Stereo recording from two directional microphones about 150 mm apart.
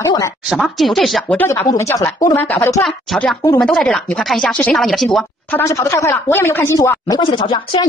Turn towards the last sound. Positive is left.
turn(degrees=35)  # may be behind; listen again after turning